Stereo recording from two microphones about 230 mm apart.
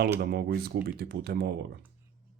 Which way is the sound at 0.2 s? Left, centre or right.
Right.